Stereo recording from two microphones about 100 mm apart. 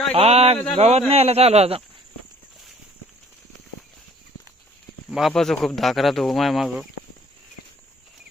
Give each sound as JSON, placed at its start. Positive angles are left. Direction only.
{"t": 0.1, "sound": "a man's voice", "side_deg": -85}
{"t": 5.1, "sound": "speech", "side_deg": 0}